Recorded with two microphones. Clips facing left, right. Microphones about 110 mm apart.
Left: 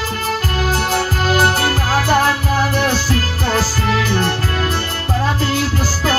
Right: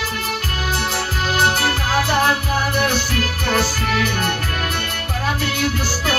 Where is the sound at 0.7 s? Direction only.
40° left (ahead or behind).